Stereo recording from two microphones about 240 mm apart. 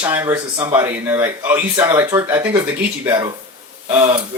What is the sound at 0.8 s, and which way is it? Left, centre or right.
Speech, centre.